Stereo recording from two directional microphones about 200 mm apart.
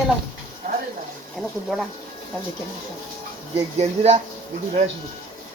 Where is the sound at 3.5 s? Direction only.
30° right (ahead or behind).